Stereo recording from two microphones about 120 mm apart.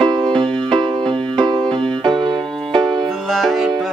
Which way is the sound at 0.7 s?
45° right (ahead or behind).